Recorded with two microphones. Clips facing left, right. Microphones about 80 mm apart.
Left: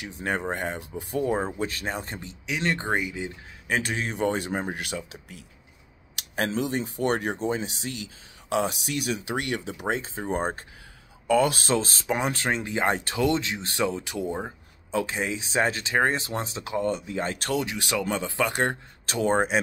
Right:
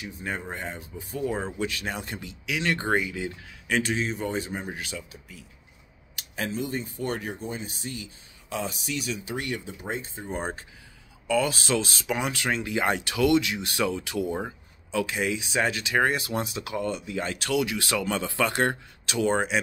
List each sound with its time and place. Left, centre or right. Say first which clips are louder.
0.0 s speech: left 5 dB; left
1.2 s speech: left 1 dB; left; by 3.3 s centre
3.6 s speech: right 1 dB; left
3.9 s speech: left 2 dB; left
10.3 s speech: left 4 dB; left
17.6 s speech: even; left
19.0 s speech: left 1 dB; left